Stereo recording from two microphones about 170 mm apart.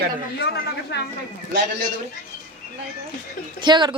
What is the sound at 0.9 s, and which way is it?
Speech, 85° left.